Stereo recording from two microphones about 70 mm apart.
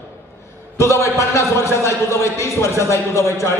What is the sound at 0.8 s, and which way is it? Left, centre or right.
A man's voice, left.